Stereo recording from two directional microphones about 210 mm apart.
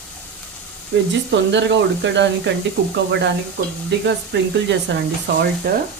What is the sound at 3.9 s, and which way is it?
Speech, 55° right (ahead or behind).